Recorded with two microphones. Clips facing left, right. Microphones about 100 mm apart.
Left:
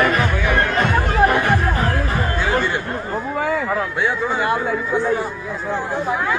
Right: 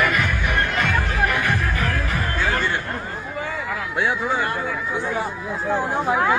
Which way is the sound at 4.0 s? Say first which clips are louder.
Right 3 dB; 5° right (ahead or behind).